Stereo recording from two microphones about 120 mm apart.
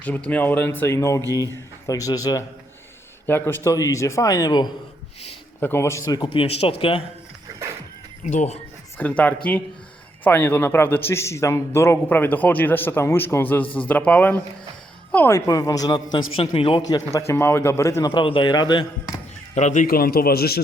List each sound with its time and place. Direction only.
0.0 s a man's voice: 15° left (ahead or behind); by 2.4 s 30° left (ahead or behind)
3.2 s a man's voice: 20° left (ahead or behind); by 4.7 s 35° left (ahead or behind)
5.5 s a man's voice: 20° left (ahead or behind)
6.2 s speech: 50° left (ahead or behind)
8.2 s speech: 85° left
9.0 s a man's voice: 15° left (ahead or behind)
15.4 s speech: 30° left (ahead or behind)
16.1 s speech: 45° left (ahead or behind)
16.9 s a man's voice: 30° left (ahead or behind)
18.1 s speech: 45° left (ahead or behind)
19.5 s speech: 85° left